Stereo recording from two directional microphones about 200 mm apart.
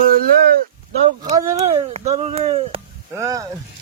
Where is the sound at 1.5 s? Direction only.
30° right (ahead or behind).